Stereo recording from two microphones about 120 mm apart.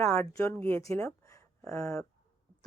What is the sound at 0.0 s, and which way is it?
A woman's voice, 20° left (ahead or behind).